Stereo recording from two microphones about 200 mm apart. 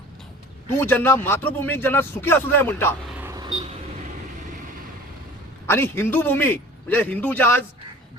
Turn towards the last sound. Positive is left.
turn(degrees=10)  # may be behind; listen again after turning